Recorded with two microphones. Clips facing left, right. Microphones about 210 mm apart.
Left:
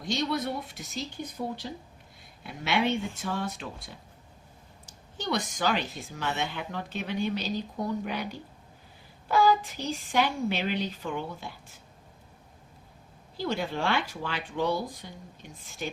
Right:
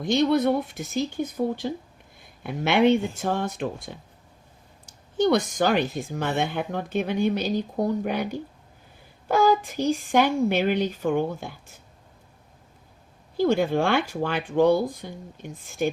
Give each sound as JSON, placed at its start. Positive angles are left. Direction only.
{"t": 0.0, "sound": "speech", "side_deg": -55}
{"t": 5.1, "sound": "speech", "side_deg": -50}
{"t": 13.3, "sound": "speech", "side_deg": -50}